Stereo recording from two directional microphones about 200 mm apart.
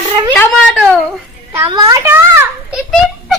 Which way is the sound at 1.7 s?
20° right (ahead or behind).